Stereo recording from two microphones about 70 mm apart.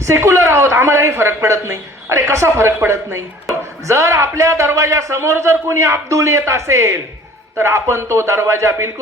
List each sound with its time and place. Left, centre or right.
0.0 s a man's voice: right